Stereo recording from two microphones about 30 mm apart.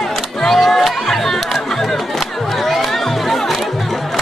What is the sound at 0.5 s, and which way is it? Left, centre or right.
Music, centre.